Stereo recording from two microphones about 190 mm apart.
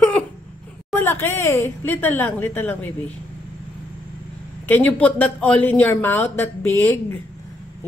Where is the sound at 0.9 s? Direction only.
10° left (ahead or behind).